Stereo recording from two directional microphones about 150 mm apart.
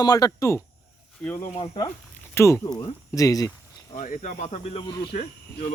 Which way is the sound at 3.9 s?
55° left (ahead or behind).